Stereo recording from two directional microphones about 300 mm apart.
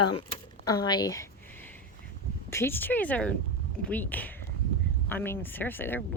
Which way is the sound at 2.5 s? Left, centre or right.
Centre.